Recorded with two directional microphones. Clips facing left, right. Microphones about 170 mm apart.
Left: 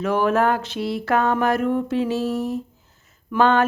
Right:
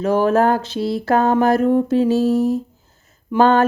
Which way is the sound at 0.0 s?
35° right (ahead or behind).